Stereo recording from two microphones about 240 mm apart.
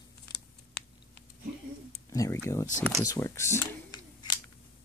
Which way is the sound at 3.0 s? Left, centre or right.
Centre.